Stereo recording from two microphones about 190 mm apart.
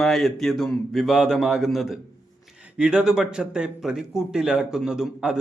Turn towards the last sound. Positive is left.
turn(degrees=-5)  # may be behind; listen again after turning